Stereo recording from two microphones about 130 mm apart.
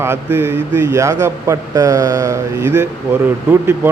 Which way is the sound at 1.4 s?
30° right (ahead or behind).